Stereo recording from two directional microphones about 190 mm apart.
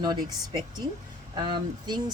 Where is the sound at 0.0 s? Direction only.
20° right (ahead or behind).